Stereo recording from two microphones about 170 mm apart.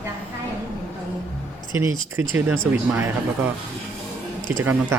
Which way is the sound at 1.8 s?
15° right (ahead or behind).